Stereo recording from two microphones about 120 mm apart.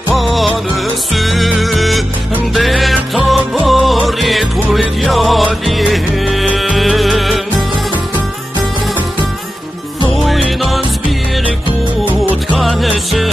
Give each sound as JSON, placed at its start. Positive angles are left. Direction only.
{"t": 0.1, "sound": "music", "side_deg": 0}
{"t": 10.1, "sound": "music", "side_deg": 0}
{"t": 12.5, "sound": "music", "side_deg": 0}